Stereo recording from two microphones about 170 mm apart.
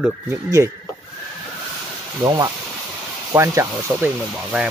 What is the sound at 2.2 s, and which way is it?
Speech, 25° right (ahead or behind).